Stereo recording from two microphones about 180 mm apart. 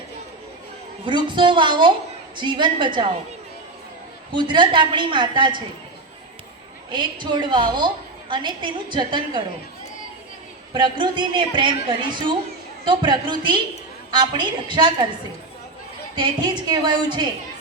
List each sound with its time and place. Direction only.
1.0 s a woman's voice: 25° right (ahead or behind)
4.4 s a woman's voice: 25° right (ahead or behind)
6.9 s a woman's voice: 25° right (ahead or behind)
10.8 s a woman's voice: 25° right (ahead or behind)
16.1 s a woman's voice: 25° right (ahead or behind)